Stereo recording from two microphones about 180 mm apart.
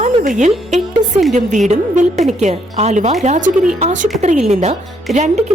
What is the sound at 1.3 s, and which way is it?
A woman's voice, 40° right (ahead or behind).